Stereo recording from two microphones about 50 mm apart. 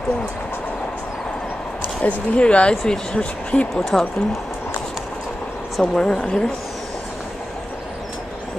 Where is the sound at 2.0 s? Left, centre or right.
Left.